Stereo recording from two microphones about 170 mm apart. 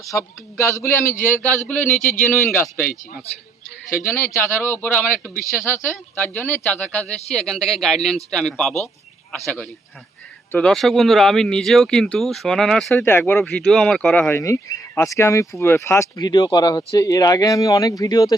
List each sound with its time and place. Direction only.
0.0 s speech: 20° left (ahead or behind)
2.0 s a man's voice: 50° left (ahead or behind)
2.5 s speech: 10° left (ahead or behind)
4.0 s speech: 15° left (ahead or behind)
10.5 s speech: 5° left (ahead or behind); by 18.3 s 20° left (ahead or behind)